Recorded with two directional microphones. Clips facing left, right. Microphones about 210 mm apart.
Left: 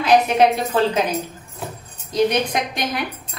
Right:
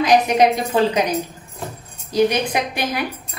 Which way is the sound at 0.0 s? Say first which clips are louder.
Even; 15° right (ahead or behind).